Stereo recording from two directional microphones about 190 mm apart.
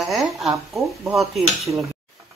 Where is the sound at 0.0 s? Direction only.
Centre (ahead or behind).